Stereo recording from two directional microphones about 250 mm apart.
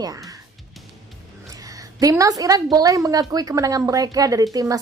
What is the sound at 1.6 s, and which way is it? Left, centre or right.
A woman's voice, centre.